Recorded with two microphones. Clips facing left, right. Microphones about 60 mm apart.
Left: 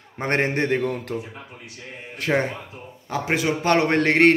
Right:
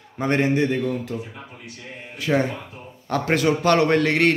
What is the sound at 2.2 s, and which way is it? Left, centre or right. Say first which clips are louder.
Speech: right 1 dB; left.